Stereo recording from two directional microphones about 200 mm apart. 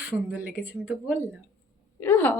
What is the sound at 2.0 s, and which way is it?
Speech, 10° left (ahead or behind).